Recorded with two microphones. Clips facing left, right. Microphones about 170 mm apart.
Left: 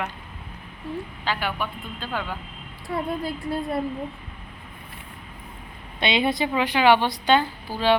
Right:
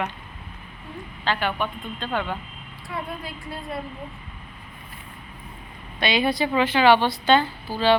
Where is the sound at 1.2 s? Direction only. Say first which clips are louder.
Right 4 dB; 10° left (ahead or behind).